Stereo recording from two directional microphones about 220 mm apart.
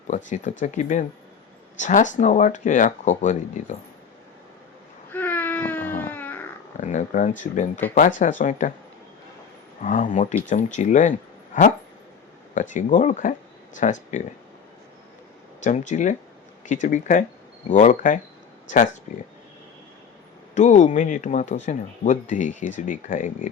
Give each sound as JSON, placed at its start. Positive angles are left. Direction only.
{"t": 0.6, "sound": "speech", "side_deg": 35}
{"t": 5.1, "sound": "baby cry", "side_deg": 10}
{"t": 6.0, "sound": "a sound", "side_deg": 10}
{"t": 6.7, "sound": "speech", "side_deg": 35}
{"t": 7.8, "sound": "speech", "side_deg": 10}
{"t": 8.2, "sound": "speech", "side_deg": 35}
{"t": 9.8, "sound": "speech", "side_deg": 35}
{"t": 12.5, "sound": "speech", "side_deg": 35}
{"t": 15.6, "sound": "speech", "side_deg": 35}
{"t": 20.6, "sound": "speech", "side_deg": 35}